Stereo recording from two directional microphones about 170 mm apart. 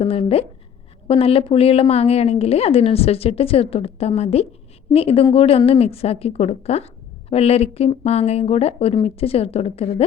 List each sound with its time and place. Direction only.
0.0 s a woman's voice: 35° left (ahead or behind)